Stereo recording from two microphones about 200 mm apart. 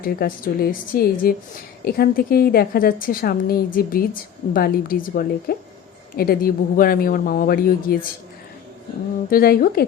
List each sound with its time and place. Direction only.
0.0 s a woman's voice: 45° left (ahead or behind)
9.3 s a woman's voice: 45° left (ahead or behind)